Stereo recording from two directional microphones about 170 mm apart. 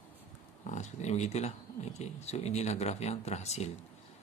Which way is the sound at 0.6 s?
40° left (ahead or behind).